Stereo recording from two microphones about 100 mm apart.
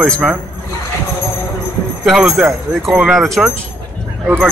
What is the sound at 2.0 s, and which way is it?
Speech, 5° right (ahead or behind).